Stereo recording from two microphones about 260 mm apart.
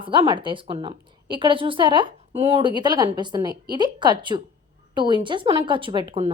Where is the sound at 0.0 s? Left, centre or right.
Centre.